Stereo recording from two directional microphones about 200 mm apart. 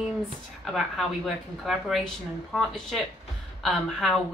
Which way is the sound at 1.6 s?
Centre (ahead or behind).